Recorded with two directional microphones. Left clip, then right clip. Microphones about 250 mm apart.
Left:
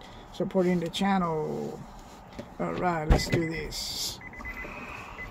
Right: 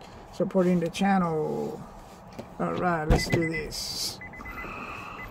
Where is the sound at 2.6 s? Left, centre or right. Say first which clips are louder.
Right 2 dB; centre.